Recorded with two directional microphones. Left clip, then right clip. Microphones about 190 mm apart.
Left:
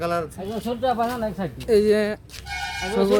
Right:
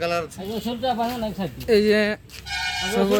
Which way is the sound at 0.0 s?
65° left (ahead or behind).